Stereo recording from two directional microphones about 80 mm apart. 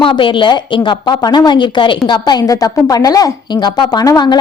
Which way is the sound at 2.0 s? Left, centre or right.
Left.